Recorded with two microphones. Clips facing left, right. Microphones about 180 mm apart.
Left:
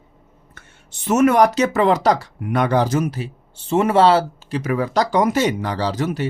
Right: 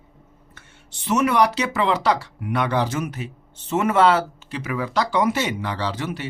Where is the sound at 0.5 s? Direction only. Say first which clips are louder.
Left 1 dB; 50° left (ahead or behind).